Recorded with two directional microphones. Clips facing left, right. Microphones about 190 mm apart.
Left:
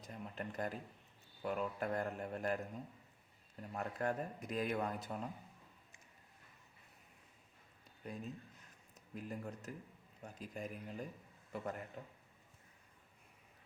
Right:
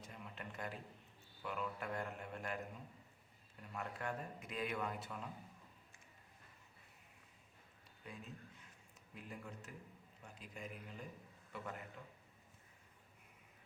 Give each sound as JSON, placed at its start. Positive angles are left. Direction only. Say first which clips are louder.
{"t": 0.0, "sound": "a sound", "louder": "left 6 dB", "side_deg": 40}
{"t": 1.4, "sound": "speech", "louder": "left 5 dB", "side_deg": 40}
{"t": 3.6, "sound": "speech", "louder": "left 6 dB", "side_deg": 40}
{"t": 8.0, "sound": "speech", "louder": "left 6 dB", "side_deg": 40}